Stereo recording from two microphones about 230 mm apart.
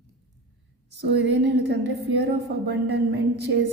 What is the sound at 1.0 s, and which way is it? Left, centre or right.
A woman's voice, right.